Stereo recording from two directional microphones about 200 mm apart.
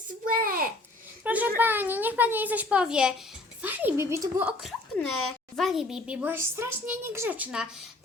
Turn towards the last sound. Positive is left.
turn(degrees=-10)  # may be behind; listen again after turning